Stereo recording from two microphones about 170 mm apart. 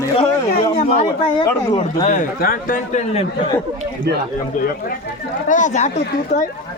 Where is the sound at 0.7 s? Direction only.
45° left (ahead or behind).